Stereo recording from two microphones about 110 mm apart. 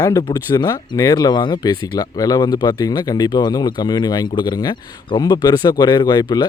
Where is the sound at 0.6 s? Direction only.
35° left (ahead or behind).